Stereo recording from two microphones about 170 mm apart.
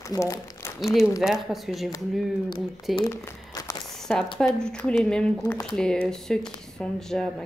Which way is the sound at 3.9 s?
5° left (ahead or behind).